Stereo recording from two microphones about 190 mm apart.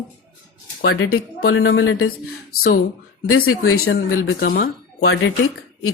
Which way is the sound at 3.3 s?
90° left.